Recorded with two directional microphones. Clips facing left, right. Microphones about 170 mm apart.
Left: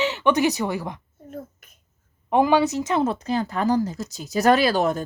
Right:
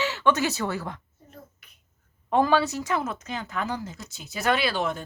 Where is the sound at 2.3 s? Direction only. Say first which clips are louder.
Left 3 dB; 15° left (ahead or behind).